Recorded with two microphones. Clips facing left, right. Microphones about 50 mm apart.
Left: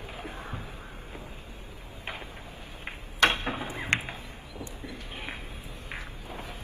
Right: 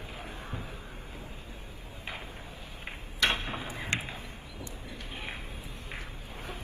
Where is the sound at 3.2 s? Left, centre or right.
Left.